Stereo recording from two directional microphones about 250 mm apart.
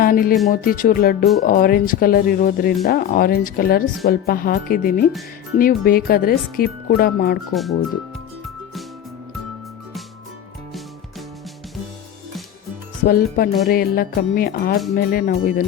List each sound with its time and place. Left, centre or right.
0.0 s a woman's voice: left
7.5 s speech: centre
13.1 s a woman's voice: left